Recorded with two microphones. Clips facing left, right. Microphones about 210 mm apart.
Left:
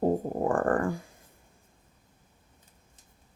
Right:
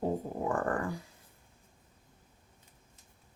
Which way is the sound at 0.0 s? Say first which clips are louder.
Left 6 dB; 50° left (ahead or behind).